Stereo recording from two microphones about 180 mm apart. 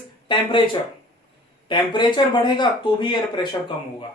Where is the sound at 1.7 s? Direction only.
25° left (ahead or behind).